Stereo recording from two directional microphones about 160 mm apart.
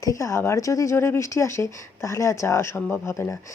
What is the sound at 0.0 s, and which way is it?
Speech, 20° left (ahead or behind).